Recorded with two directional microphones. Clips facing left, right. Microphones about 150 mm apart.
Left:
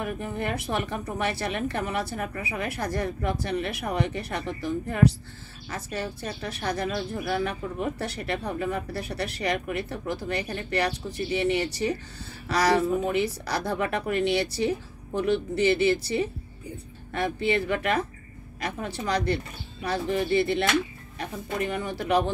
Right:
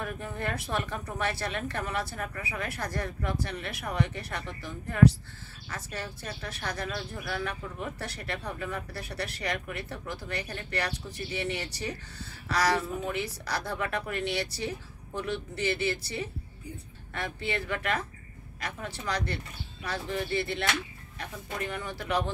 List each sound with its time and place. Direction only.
0.0 s speech: 15° left (ahead or behind)